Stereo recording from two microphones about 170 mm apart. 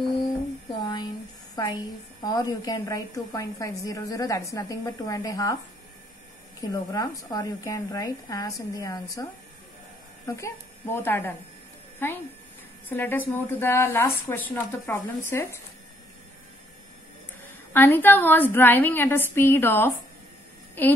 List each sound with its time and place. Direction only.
0.7 s a sound: 25° left (ahead or behind)
1.5 s a woman's voice: 20° left (ahead or behind)
6.6 s a woman's voice: 20° left (ahead or behind)
10.2 s a woman's voice: 15° left (ahead or behind)
17.5 s a woman's voice: 10° left (ahead or behind)